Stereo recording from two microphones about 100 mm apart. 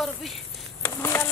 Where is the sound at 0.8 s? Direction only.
25° left (ahead or behind).